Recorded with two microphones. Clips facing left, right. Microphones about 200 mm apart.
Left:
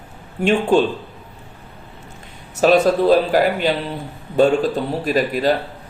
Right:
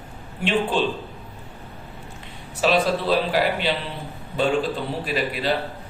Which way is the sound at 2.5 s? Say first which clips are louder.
Left 7 dB; 45° left (ahead or behind).